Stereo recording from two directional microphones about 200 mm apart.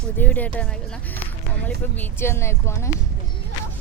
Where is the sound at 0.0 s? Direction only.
10° left (ahead or behind).